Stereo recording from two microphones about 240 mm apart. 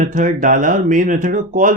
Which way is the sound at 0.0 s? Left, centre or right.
Right.